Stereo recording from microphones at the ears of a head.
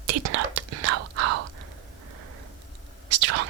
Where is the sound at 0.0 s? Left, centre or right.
Right.